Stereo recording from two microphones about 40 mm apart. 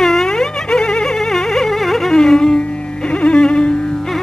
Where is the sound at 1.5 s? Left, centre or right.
Centre.